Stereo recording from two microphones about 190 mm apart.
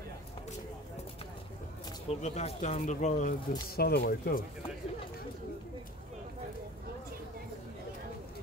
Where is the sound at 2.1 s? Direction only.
35° left (ahead or behind).